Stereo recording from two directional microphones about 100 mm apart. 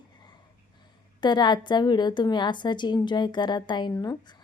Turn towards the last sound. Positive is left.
turn(degrees=35)  # may be behind; listen again after turning